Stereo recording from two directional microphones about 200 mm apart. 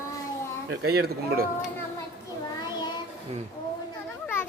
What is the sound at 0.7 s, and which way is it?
Speech, 55° right (ahead or behind).